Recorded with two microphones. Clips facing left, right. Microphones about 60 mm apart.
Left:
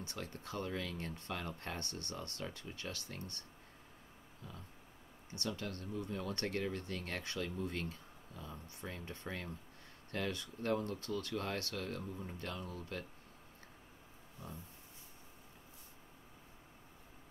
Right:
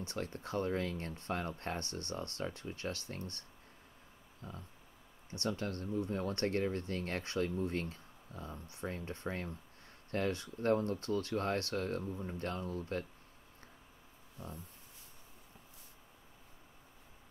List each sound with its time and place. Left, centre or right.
0.0 s speech: right
4.4 s a sound: right
5.4 s speech: right